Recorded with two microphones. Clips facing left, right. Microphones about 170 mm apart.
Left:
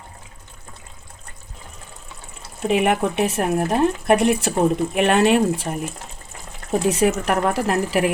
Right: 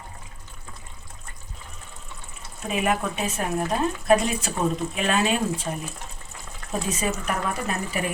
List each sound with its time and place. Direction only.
2.6 s speech: 75° left (ahead or behind)
6.8 s speech: 70° left (ahead or behind)